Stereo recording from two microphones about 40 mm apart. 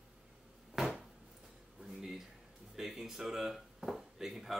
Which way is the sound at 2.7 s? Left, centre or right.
Centre.